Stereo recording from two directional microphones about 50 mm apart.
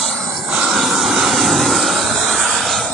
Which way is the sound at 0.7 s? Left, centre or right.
Centre.